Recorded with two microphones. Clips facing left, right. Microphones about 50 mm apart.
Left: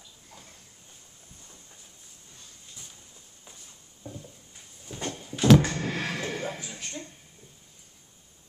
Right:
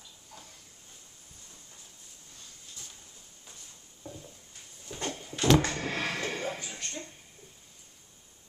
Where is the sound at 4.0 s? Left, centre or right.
Centre.